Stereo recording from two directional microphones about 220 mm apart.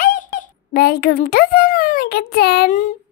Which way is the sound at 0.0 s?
40° left (ahead or behind).